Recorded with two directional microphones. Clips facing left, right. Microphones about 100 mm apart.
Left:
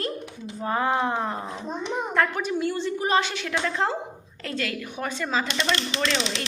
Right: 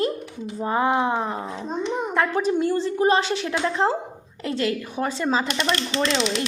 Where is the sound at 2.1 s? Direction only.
25° right (ahead or behind).